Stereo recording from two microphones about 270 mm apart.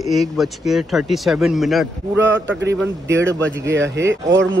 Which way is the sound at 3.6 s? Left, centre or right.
Right.